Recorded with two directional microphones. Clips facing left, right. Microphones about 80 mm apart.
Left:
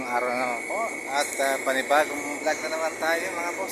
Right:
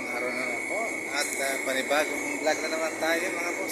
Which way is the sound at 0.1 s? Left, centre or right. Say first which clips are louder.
Left 7 dB; left.